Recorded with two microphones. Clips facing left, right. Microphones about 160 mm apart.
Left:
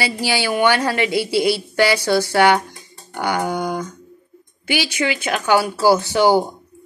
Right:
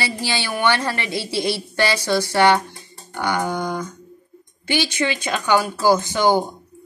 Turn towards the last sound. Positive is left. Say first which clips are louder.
# left 2 dB
turn(degrees=10)  # may be behind; listen again after turning